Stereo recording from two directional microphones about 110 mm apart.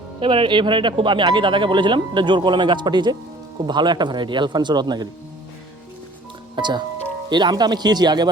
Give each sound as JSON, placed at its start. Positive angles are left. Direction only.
{"t": 0.2, "sound": "speech", "side_deg": -50}
{"t": 6.6, "sound": "a man's voice", "side_deg": -45}